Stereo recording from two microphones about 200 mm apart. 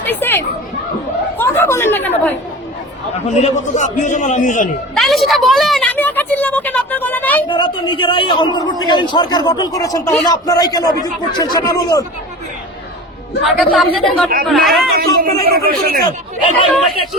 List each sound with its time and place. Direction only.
0.0 s speech: 10° left (ahead or behind)
1.4 s chatter: 10° left (ahead or behind)
3.2 s a man's voice: 40° left (ahead or behind)
4.9 s a woman's voice: centre (ahead or behind)
7.4 s a man's voice: 25° left (ahead or behind)
13.4 s a woman's voice: centre (ahead or behind)
14.9 s a man's voice: 50° right (ahead or behind)